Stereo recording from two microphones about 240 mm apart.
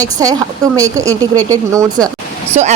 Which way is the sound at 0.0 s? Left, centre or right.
Centre.